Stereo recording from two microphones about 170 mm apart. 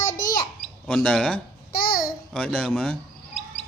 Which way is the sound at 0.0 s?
50° left (ahead or behind).